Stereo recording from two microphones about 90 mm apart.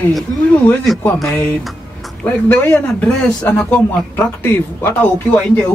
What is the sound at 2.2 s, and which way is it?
A man's voice, 20° left (ahead or behind).